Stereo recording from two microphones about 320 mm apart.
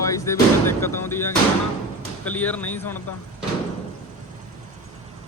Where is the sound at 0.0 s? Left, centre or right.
Centre.